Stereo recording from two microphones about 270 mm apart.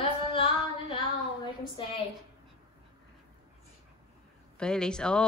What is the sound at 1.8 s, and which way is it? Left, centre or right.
Speech, centre.